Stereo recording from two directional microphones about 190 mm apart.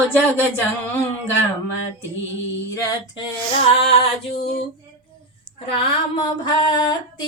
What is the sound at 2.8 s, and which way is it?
Speech, 20° left (ahead or behind).